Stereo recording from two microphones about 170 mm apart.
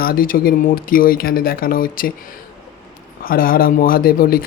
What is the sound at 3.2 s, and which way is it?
Speech, 60° left (ahead or behind).